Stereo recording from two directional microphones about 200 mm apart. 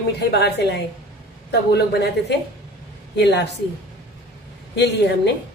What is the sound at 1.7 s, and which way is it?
Speech, 55° left (ahead or behind).